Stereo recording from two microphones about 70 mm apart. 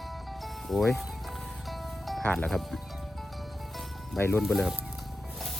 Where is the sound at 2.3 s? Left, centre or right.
Centre.